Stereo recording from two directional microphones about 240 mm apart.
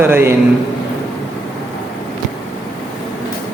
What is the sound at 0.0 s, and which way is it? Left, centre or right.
Speech, centre.